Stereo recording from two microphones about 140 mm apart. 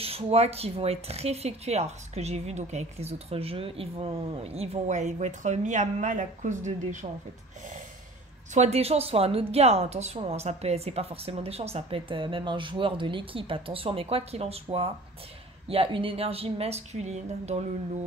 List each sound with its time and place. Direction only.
0.0 s speech: 45° right (ahead or behind)
8.5 s speech: 50° right (ahead or behind)